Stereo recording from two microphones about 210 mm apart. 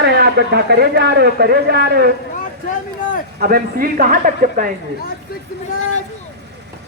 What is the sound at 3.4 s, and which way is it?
A man's voice, 45° right (ahead or behind).